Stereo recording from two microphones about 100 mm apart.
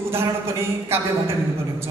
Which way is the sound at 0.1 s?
25° right (ahead or behind).